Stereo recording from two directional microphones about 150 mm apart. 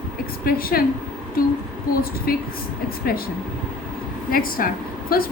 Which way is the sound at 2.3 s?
80° left.